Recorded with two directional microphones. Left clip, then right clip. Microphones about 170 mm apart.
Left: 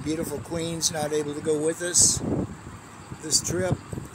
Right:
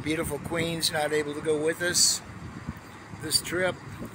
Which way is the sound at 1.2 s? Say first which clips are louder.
Left 1 dB; 10° left (ahead or behind).